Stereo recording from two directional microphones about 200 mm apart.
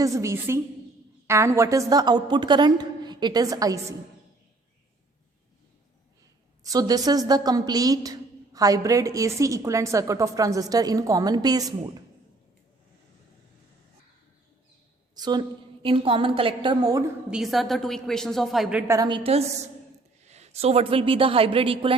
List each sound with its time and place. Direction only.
0.0 s a woman's voice: 15° right (ahead or behind)
6.6 s a woman's voice: 20° right (ahead or behind)
15.1 s a woman's voice: 20° right (ahead or behind)
17.3 s a woman's voice: centre (ahead or behind)
18.9 s a woman's voice: 20° right (ahead or behind)